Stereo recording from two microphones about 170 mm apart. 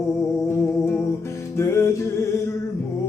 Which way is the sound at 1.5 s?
15° left (ahead or behind).